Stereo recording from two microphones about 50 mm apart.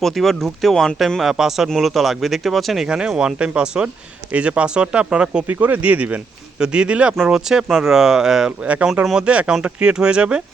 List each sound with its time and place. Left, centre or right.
0.0 s speech: centre
1.2 s speech: centre
2.8 s speech: centre
5.5 s speech: right
7.3 s speech: centre
8.6 s speech: right